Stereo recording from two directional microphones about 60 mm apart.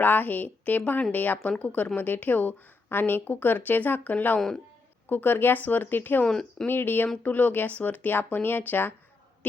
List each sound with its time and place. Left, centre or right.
0.0 s a woman's voice: left
4.4 s speech: centre
5.0 s a woman's voice: left
6.2 s speech: centre
6.7 s a woman's voice: left